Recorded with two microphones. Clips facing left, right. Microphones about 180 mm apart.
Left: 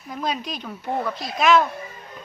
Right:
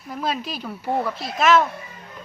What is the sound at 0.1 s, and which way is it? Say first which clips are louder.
Speech: right 1 dB; 5° right (ahead or behind).